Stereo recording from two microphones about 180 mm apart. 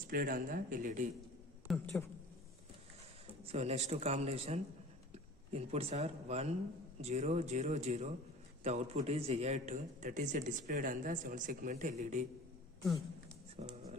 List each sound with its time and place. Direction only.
0.1 s a man's voice: 50° right (ahead or behind)
1.7 s speech: centre (ahead or behind)
3.4 s a man's voice: 35° right (ahead or behind)